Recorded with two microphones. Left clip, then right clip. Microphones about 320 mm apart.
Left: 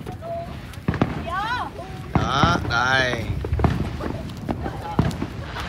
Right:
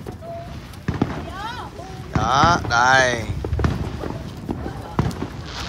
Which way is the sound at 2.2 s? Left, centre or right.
Centre.